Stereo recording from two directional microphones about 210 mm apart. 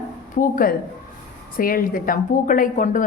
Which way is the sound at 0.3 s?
40° left (ahead or behind).